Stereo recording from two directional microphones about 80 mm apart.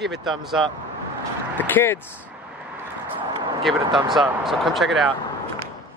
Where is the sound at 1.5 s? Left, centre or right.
Left.